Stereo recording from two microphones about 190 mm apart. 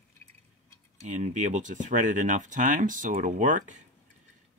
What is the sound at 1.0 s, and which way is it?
Speech, 40° right (ahead or behind).